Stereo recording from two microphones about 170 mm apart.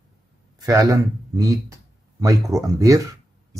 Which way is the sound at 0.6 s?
20° right (ahead or behind).